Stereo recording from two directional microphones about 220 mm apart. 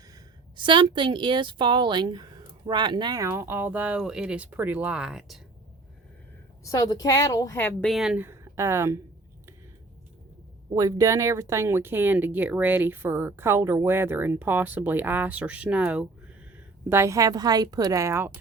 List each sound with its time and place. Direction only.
0.1 s a woman's voice: 20° right (ahead or behind); by 5.4 s 5° right (ahead or behind)
6.7 s speech: 15° left (ahead or behind); by 9.0 s 10° right (ahead or behind)
10.7 s speech: 15° right (ahead or behind)